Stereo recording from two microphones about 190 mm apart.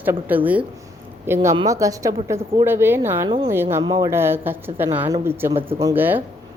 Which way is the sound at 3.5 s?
10° right (ahead or behind).